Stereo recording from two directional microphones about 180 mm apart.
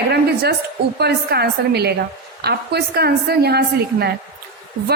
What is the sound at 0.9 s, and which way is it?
A woman's voice, 65° right (ahead or behind).